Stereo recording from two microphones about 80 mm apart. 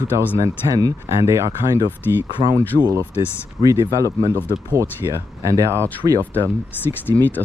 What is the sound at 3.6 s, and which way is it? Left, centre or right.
Speech, right.